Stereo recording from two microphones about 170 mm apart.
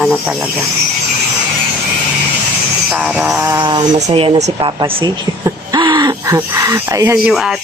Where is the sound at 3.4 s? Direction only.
20° right (ahead or behind).